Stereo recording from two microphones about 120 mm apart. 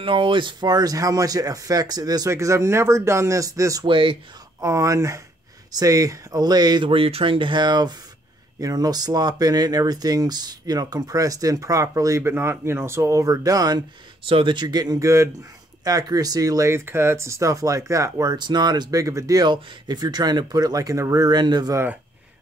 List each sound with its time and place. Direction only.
0.0 s speech: 45° right (ahead or behind); by 3.8 s 25° right (ahead or behind)
3.8 s speech: 45° right (ahead or behind)
4.6 s speech: 25° right (ahead or behind)